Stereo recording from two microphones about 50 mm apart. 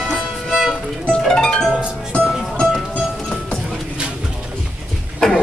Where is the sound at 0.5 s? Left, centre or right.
Centre.